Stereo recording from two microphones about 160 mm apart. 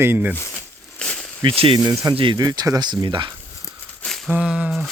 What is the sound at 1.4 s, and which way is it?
Speech, 35° right (ahead or behind).